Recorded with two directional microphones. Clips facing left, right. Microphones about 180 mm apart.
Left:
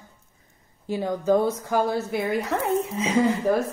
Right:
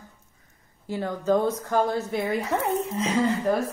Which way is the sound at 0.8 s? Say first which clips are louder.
Left 3 dB; 15° left (ahead or behind).